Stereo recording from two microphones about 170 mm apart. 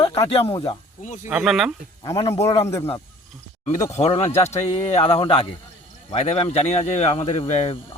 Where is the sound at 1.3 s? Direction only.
5° right (ahead or behind).